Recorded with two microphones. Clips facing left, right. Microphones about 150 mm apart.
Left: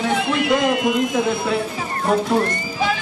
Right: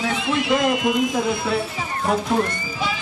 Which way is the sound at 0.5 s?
Centre (ahead or behind).